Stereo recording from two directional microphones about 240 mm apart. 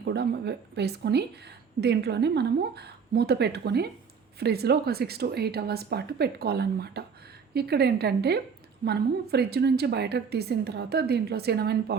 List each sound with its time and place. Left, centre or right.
0.0 s a woman's voice: right